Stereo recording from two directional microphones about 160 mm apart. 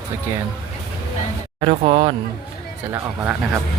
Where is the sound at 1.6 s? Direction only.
40° right (ahead or behind).